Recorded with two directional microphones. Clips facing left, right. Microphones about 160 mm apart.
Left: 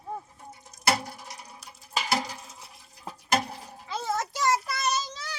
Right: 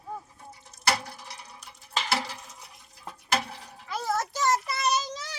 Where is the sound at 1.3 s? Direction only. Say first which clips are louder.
Left 1 dB; 5° left (ahead or behind).